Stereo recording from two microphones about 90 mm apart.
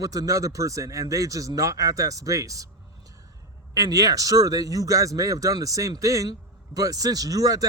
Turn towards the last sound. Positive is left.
turn(degrees=-40)  # may be behind; listen again after turning